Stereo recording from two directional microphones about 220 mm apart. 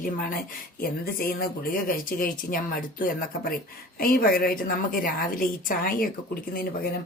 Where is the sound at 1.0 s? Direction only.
40° left (ahead or behind).